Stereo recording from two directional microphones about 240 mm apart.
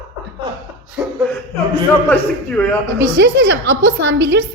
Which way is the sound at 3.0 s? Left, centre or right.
Right.